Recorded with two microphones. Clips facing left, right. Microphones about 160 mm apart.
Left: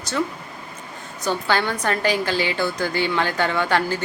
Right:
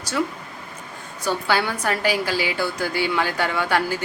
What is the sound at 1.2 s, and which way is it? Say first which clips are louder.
A woman's voice: even; 10° right (ahead or behind).